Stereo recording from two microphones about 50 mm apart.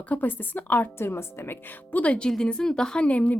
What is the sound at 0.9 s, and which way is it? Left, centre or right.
Speech, left.